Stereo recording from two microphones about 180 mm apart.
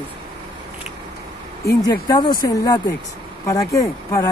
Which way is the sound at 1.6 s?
20° left (ahead or behind).